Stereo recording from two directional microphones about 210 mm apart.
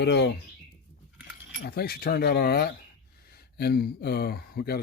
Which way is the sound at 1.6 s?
45° left (ahead or behind).